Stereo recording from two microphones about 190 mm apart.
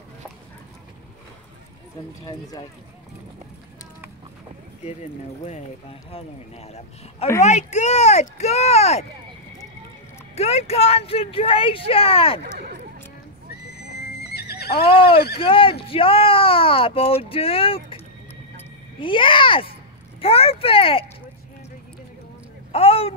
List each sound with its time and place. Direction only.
5.4 s speech: 35° left (ahead or behind)
10.3 s speech: 35° left (ahead or behind)
13.7 s neigh: 55° left (ahead or behind)
14.9 s speech: 30° left (ahead or behind)
22.7 s a sound: 30° left (ahead or behind)